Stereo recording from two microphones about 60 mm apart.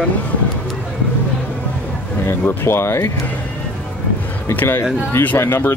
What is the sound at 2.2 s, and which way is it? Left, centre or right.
Speech, left.